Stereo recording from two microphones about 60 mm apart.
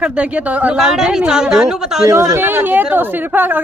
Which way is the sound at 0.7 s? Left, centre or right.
Centre.